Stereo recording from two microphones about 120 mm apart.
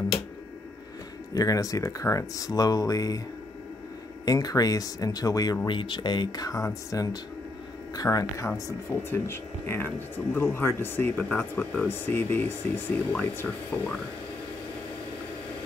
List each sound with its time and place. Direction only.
1.3 s speech: 30° left (ahead or behind)
4.3 s speech: 30° left (ahead or behind)
5.7 s speech: 45° left (ahead or behind); by 13.6 s 10° left (ahead or behind)